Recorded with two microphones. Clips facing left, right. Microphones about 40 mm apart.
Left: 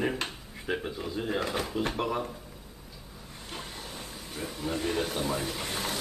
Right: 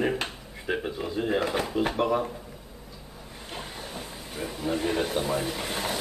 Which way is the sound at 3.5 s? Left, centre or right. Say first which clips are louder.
Right 3 dB; centre.